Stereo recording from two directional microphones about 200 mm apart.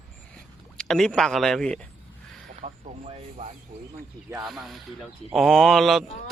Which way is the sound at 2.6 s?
30° right (ahead or behind).